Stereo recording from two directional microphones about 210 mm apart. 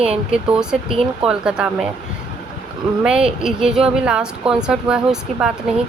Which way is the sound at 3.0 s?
5° right (ahead or behind).